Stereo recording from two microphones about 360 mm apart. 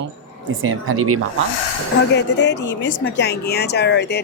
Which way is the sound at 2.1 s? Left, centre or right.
Left.